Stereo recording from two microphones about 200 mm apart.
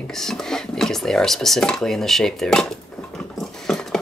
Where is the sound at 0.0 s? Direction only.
Centre (ahead or behind).